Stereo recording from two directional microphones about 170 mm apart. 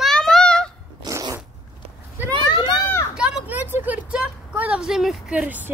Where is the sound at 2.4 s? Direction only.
25° left (ahead or behind).